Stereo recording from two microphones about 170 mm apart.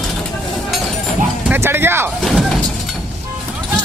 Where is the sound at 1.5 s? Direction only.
15° right (ahead or behind).